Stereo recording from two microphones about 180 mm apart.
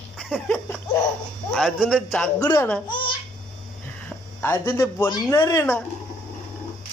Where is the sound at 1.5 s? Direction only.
Centre (ahead or behind).